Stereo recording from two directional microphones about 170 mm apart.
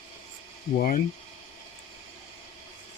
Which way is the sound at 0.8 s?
55° left (ahead or behind).